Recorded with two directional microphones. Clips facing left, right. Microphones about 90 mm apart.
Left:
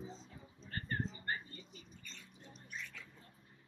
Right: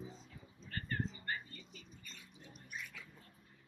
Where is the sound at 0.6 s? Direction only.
30° left (ahead or behind).